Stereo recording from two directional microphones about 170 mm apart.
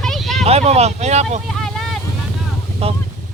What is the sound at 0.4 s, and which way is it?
Speech, 40° right (ahead or behind).